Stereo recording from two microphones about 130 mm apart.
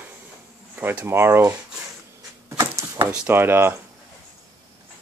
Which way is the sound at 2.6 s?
20° right (ahead or behind).